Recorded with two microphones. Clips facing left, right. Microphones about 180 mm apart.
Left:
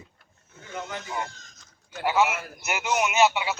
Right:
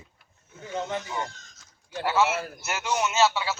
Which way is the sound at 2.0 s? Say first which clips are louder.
Left 1 dB; 15° left (ahead or behind).